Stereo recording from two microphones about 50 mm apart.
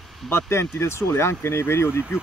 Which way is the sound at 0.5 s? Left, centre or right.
Left.